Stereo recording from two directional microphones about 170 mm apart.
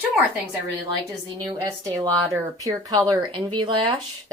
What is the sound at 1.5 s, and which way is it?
Speech, 25° right (ahead or behind).